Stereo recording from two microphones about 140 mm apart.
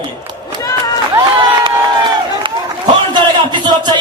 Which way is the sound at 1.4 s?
35° right (ahead or behind).